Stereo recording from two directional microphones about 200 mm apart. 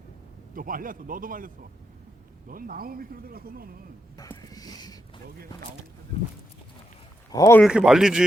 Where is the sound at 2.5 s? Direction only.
45° right (ahead or behind).